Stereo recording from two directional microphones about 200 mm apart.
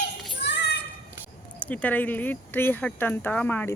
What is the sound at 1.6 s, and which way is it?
Speech, 10° left (ahead or behind).